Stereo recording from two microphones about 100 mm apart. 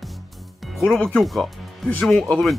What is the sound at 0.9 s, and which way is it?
Speech, 10° left (ahead or behind).